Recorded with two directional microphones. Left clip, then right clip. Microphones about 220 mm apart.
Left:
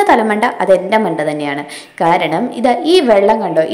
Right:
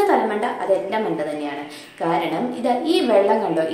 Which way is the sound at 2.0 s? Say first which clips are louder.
Left 9 dB; 35° left (ahead or behind).